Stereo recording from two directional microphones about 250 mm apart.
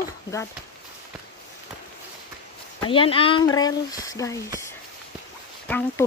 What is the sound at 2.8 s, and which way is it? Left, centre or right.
Speech, left.